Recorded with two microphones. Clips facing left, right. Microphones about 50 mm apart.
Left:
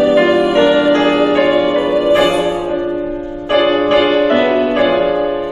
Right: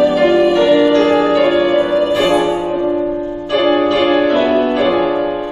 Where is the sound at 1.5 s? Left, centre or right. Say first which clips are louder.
Even; centre.